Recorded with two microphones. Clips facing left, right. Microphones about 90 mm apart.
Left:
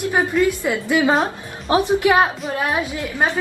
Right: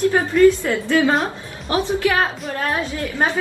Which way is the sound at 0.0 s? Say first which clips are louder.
Right 4 dB; 15° left (ahead or behind).